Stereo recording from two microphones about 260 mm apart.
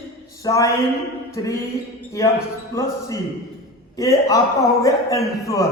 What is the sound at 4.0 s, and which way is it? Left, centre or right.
A man's voice, centre.